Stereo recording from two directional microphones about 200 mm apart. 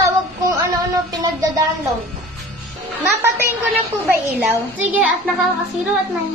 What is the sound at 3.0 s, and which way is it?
A child's voice, 10° right (ahead or behind).